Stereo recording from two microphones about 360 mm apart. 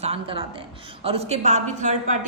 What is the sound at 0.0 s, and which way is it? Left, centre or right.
A woman's voice, centre.